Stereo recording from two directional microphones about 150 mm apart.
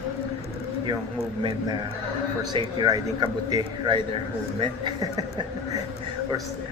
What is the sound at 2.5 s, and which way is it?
Speech, 25° right (ahead or behind).